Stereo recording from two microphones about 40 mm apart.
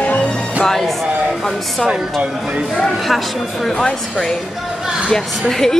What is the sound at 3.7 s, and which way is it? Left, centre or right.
Speech, left.